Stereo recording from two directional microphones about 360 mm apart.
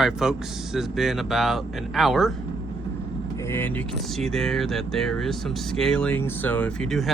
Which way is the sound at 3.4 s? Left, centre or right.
Centre.